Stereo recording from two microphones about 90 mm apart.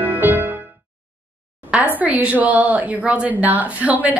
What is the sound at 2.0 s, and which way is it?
Speech, 15° right (ahead or behind).